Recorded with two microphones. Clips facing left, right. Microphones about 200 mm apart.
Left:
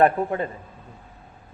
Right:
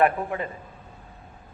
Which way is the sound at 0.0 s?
35° left (ahead or behind).